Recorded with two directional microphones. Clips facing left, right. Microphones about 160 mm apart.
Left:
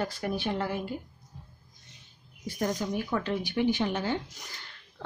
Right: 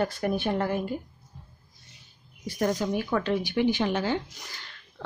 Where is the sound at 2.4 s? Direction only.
80° right.